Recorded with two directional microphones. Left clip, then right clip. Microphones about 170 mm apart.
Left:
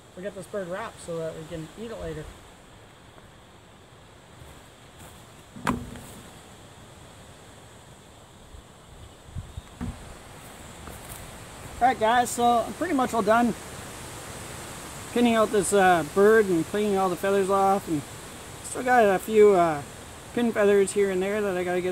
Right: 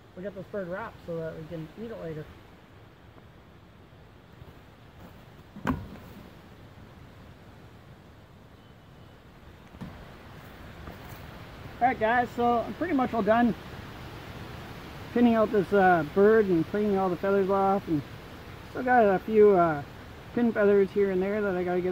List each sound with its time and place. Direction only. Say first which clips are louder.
0.2 s speech: left 2 dB; 25° left (ahead or behind)
11.8 s speech: left 3 dB; 25° left (ahead or behind)
15.1 s speech: left 2 dB; 15° left (ahead or behind)